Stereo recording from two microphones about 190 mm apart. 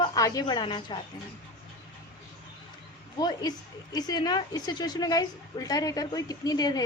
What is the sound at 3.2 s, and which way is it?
Speech, 20° left (ahead or behind).